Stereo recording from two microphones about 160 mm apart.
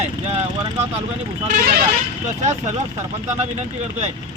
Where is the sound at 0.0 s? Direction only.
40° right (ahead or behind).